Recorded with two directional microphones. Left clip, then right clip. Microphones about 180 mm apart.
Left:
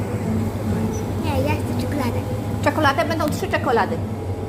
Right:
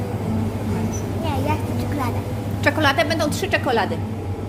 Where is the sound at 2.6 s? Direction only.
20° right (ahead or behind).